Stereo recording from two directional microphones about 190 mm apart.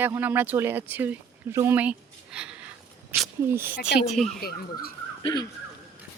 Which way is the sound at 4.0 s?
Centre (ahead or behind).